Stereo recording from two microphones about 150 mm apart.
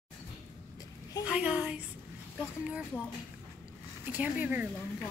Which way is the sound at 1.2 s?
5° right (ahead or behind).